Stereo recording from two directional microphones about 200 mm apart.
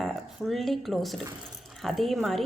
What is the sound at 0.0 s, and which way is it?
A woman's voice, centre (ahead or behind).